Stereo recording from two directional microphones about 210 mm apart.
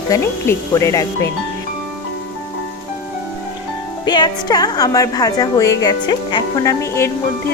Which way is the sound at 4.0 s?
20° left (ahead or behind).